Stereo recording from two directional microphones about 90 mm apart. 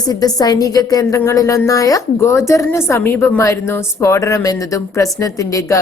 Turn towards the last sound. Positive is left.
turn(degrees=35)  # may be behind; listen again after turning